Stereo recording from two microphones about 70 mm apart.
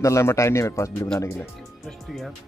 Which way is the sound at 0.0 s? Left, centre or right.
Left.